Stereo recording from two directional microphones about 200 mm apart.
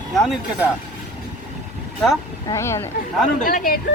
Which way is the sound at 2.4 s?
15° left (ahead or behind).